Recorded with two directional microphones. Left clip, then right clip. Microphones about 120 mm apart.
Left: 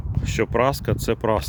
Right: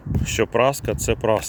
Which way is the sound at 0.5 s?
40° left (ahead or behind).